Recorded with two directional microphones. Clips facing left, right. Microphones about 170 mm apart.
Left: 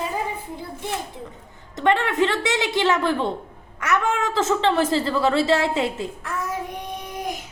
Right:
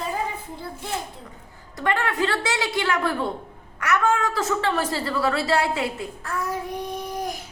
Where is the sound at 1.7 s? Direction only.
20° left (ahead or behind).